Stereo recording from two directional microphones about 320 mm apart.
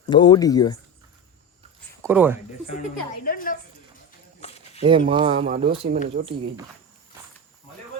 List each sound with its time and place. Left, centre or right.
0.0 s speech: centre
2.0 s speech: centre
3.2 s a woman's voice: left
4.4 s a sound: centre
4.8 s speech: centre